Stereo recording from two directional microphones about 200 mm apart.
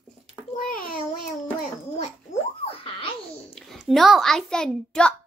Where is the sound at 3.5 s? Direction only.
Centre (ahead or behind).